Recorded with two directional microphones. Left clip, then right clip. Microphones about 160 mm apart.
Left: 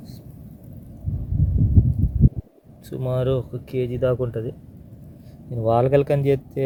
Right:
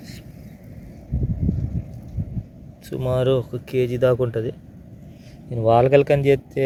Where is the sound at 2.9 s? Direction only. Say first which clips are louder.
Right 3 dB; centre (ahead or behind); by 4.5 s 20° right (ahead or behind).